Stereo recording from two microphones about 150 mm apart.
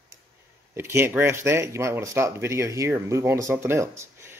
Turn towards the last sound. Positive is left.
turn(degrees=-15)  # may be behind; listen again after turning